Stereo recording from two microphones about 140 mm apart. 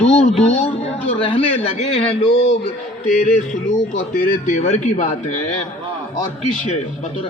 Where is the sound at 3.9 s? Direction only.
90° left.